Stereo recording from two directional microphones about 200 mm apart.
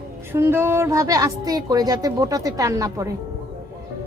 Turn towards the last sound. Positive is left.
turn(degrees=-15)  # may be behind; listen again after turning